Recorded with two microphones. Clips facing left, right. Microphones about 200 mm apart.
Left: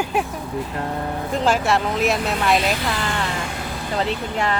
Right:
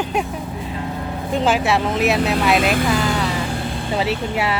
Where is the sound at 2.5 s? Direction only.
50° right (ahead or behind).